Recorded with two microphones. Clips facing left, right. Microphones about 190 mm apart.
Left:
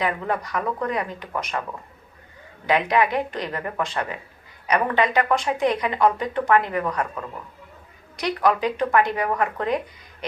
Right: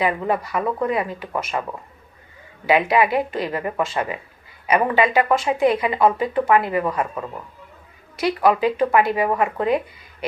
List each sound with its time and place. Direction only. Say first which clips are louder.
0.0 s a woman's voice: right 4 dB; 5° right (ahead or behind)
2.6 s a woman's voice: right 3 dB; 5° right (ahead or behind)